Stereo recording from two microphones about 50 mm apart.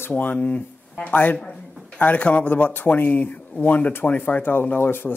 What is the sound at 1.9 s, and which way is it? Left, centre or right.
A man's voice, left.